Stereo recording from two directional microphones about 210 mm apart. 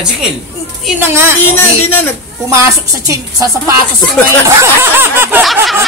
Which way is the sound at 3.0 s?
15° right (ahead or behind).